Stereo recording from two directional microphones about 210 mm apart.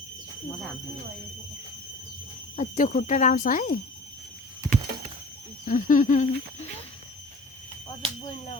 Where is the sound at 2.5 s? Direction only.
40° left (ahead or behind).